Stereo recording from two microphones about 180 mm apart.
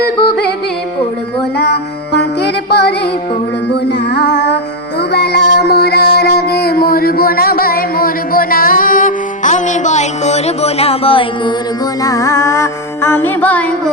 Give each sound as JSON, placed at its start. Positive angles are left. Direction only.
{"t": 1.5, "sound": "music", "side_deg": 65}
{"t": 12.0, "sound": "music", "side_deg": 20}